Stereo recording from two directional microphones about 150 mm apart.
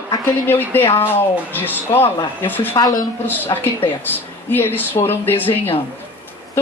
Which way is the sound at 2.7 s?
25° left (ahead or behind).